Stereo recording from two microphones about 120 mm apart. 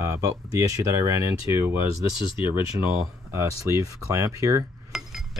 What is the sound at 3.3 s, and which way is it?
Speech, 30° right (ahead or behind).